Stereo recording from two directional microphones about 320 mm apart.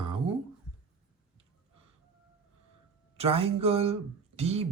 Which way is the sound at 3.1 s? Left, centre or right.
Centre.